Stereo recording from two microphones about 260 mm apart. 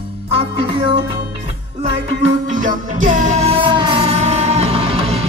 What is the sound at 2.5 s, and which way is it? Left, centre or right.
Music, right.